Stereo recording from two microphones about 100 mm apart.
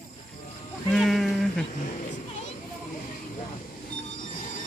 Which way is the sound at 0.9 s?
Centre (ahead or behind).